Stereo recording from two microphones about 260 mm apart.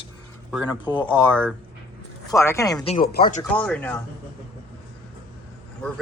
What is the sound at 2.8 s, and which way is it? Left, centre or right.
Speech, left.